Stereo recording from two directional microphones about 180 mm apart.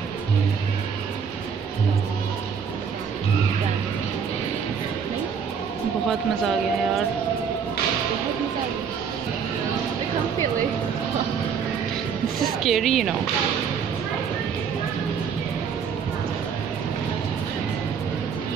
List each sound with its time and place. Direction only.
12.4 s a woman's voice: centre (ahead or behind)